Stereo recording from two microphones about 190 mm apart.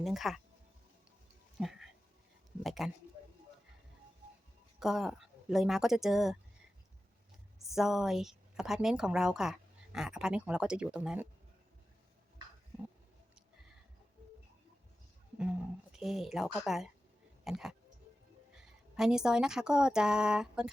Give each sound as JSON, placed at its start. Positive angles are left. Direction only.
{"t": 0.0, "sound": "a woman's voice", "side_deg": 0}
{"t": 1.5, "sound": "a sound", "side_deg": 0}
{"t": 2.6, "sound": "a woman's voice", "side_deg": 0}
{"t": 4.8, "sound": "a woman's voice", "side_deg": 0}
{"t": 7.7, "sound": "a woman's voice", "side_deg": 0}
{"t": 16.0, "sound": "a woman's voice", "side_deg": 0}